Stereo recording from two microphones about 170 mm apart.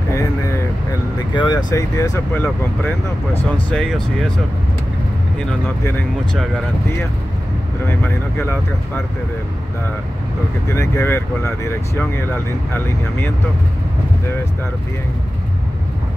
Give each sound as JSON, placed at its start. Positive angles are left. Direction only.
{"t": 0.1, "sound": "vehicle", "side_deg": 15}
{"t": 1.3, "sound": "speech", "side_deg": 25}
{"t": 7.9, "sound": "speech", "side_deg": 15}
{"t": 10.7, "sound": "speech", "side_deg": 15}